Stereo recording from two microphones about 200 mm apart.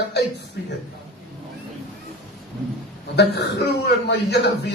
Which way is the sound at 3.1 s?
55° left (ahead or behind).